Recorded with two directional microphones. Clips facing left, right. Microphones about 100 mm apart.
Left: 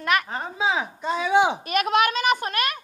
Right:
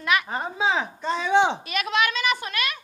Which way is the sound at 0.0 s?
45° left (ahead or behind).